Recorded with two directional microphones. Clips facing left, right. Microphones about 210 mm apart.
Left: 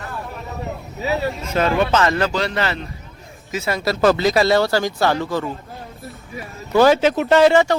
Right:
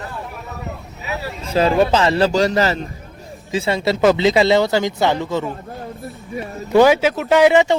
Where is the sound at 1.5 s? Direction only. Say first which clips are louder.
Right 4 dB; 35° right (ahead or behind).